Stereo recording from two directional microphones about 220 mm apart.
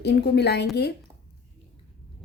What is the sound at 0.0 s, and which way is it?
Speech, 50° left (ahead or behind).